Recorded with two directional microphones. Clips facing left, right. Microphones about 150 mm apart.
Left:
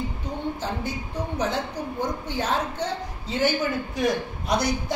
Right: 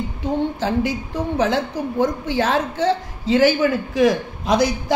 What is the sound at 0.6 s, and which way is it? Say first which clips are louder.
A woman's voice: right 9 dB; 90° right.